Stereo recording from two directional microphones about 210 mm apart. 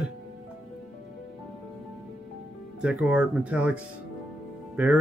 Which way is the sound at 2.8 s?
5° right (ahead or behind).